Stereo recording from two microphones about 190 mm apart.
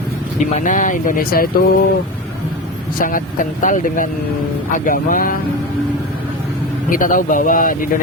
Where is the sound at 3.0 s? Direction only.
45° left (ahead or behind).